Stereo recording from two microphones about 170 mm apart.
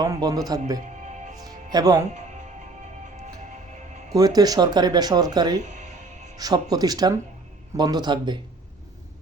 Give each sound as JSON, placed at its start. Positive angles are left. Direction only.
{"t": 0.0, "sound": "speech", "side_deg": -20}
{"t": 1.4, "sound": "music", "side_deg": -20}
{"t": 4.1, "sound": "speech", "side_deg": -20}